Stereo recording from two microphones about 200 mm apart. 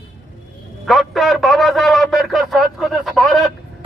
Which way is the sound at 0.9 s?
Centre (ahead or behind).